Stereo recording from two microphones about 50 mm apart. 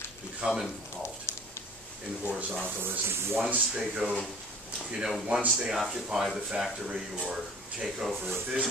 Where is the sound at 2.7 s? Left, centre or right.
Right.